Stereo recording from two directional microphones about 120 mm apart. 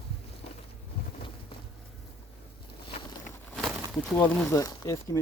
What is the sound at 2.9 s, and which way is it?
Vehicle, 40° left (ahead or behind).